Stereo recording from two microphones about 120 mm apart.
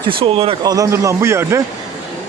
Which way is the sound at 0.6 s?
30° right (ahead or behind).